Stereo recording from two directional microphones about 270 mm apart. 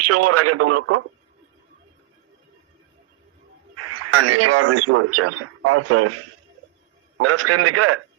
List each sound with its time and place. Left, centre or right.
0.0 s speech: right
3.8 s speech: right
7.2 s speech: right